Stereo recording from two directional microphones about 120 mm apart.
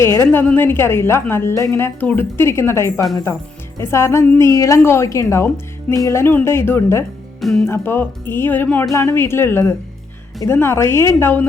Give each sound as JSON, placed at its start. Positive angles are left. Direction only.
{"t": 0.0, "sound": "a woman's voice", "side_deg": 25}